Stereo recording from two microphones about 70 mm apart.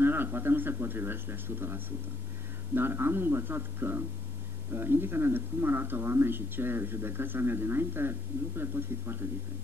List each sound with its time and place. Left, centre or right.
0.0 s speech: right